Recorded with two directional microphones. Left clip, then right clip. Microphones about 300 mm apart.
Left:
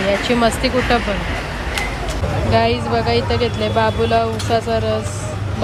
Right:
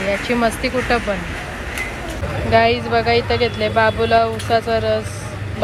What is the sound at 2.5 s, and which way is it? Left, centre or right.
A woman's voice, centre.